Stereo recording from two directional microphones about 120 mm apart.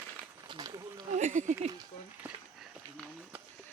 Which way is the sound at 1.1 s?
90° right.